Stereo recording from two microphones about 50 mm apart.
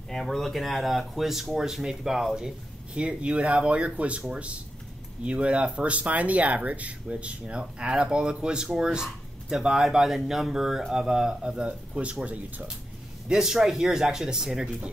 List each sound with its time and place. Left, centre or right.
0.1 s speech: centre; by 12.6 s right
13.3 s speech: centre